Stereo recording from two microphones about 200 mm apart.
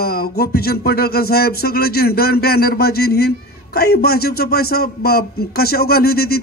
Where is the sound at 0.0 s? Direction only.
50° left (ahead or behind).